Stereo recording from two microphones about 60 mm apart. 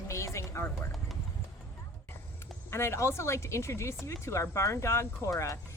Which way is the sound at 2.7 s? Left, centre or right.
Left.